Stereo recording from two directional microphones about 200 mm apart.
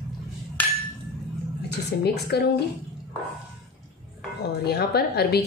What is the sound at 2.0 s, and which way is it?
Speech, 55° left (ahead or behind).